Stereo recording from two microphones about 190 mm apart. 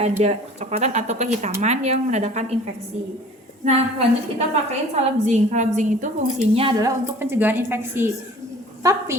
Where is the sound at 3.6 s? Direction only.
35° right (ahead or behind).